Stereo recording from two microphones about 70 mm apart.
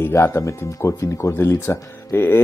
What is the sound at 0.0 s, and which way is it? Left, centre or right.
Speech, left.